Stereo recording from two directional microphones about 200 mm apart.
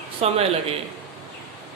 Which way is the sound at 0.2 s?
30° right (ahead or behind).